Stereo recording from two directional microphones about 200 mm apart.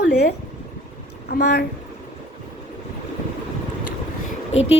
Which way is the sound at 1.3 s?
50° left (ahead or behind).